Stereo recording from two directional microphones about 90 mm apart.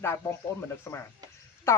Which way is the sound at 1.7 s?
30° left (ahead or behind).